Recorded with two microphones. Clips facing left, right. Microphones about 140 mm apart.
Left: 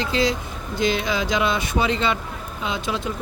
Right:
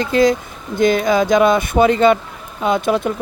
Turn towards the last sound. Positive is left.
turn(degrees=-55)  # may be behind; listen again after turning